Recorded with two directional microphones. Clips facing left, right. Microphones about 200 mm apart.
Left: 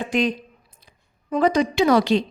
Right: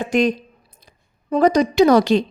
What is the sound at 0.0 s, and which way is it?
A woman's voice, 45° right (ahead or behind).